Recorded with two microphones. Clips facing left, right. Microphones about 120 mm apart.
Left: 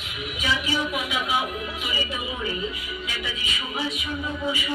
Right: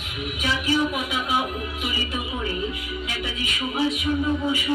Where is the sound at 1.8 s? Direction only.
50° right (ahead or behind).